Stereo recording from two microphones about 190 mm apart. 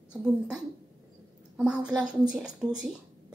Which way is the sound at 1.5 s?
5° right (ahead or behind).